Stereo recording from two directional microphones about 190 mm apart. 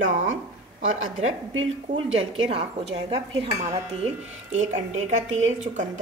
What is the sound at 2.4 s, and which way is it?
Speech, 30° right (ahead or behind).